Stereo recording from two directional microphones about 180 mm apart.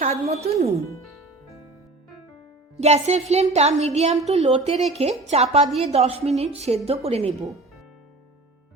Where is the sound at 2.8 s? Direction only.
40° right (ahead or behind).